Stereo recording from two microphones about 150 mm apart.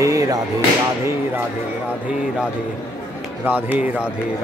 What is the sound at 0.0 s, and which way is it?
Music, 20° right (ahead or behind).